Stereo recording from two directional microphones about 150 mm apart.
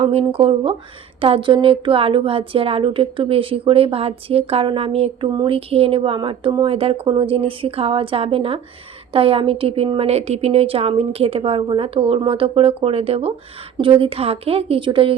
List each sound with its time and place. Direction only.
0.0 s a woman's voice: 40° right (ahead or behind)